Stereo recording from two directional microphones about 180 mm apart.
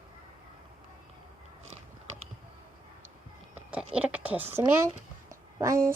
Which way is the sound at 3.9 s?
5° right (ahead or behind).